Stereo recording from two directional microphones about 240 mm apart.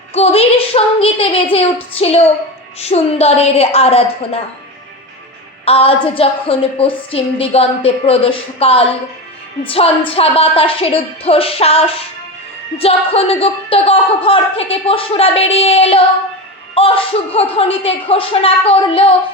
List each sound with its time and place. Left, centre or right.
0.1 s a woman's voice: left
5.6 s a woman's voice: left